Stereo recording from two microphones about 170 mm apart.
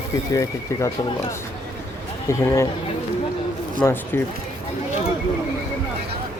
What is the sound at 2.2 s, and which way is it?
Speech, 15° left (ahead or behind).